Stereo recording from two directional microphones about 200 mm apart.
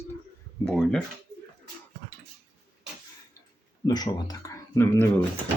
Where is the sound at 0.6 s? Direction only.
Centre (ahead or behind).